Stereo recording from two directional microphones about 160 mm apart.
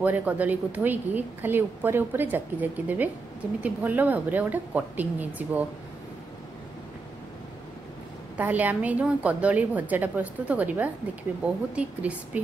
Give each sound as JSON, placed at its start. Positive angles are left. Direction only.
{"t": 0.0, "sound": "a woman's voice", "side_deg": -10}
{"t": 8.4, "sound": "a woman's voice", "side_deg": -10}